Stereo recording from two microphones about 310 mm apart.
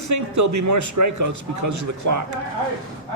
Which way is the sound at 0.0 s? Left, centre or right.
Right.